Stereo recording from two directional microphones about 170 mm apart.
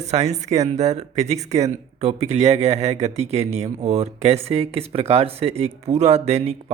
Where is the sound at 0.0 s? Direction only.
40° right (ahead or behind).